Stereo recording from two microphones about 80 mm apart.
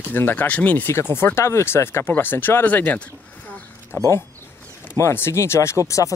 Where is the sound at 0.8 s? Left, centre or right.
Left.